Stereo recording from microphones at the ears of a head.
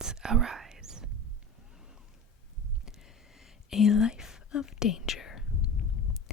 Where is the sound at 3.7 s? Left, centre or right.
Left.